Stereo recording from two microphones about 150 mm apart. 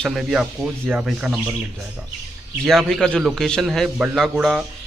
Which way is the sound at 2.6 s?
5° left (ahead or behind).